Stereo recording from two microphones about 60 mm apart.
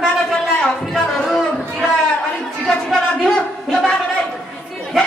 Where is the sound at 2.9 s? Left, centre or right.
Centre.